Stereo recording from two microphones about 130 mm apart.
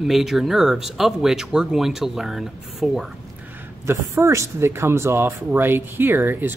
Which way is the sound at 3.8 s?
20° right (ahead or behind).